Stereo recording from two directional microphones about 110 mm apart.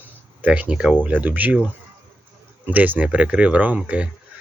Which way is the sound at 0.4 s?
15° right (ahead or behind).